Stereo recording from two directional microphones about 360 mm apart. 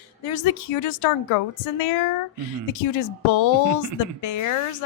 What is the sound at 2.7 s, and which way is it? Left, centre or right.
A woman's voice, left.